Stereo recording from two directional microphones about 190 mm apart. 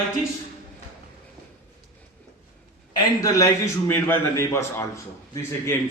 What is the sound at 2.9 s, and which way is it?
A man's voice, 20° left (ahead or behind).